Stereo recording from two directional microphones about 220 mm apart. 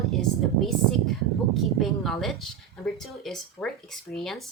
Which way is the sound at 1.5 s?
Centre (ahead or behind).